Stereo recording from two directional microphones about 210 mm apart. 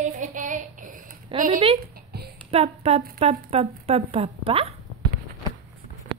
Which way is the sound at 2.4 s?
30° right (ahead or behind).